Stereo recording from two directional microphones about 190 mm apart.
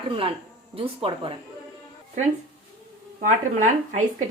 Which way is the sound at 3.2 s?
40° right (ahead or behind).